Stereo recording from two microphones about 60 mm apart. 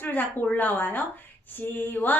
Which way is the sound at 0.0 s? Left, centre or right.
Left.